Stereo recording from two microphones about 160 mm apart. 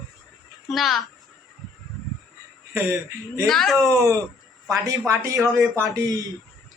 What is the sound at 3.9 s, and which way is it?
Speech, 20° right (ahead or behind).